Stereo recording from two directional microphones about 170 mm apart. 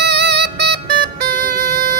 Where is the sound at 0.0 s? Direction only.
75° right (ahead or behind).